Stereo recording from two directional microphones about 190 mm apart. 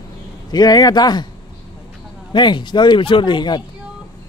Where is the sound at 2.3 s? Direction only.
25° left (ahead or behind).